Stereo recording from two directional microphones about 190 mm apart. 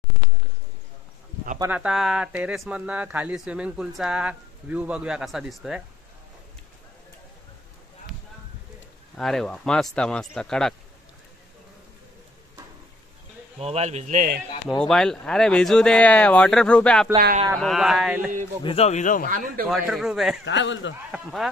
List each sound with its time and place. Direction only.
1.6 s speech: 5° right (ahead or behind)
9.1 s speech: centre (ahead or behind)
13.6 s speech: 35° right (ahead or behind)
14.7 s speech: 5° left (ahead or behind)
18.6 s speech: 30° left (ahead or behind)
19.2 s a man's voice: 45° right (ahead or behind)
19.7 s speech: centre (ahead or behind)
20.4 s speech: 70° left (ahead or behind)
21.1 s speech: centre (ahead or behind)